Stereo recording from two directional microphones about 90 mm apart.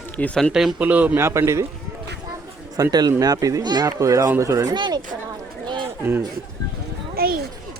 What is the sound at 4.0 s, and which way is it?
Speech, 40° right (ahead or behind).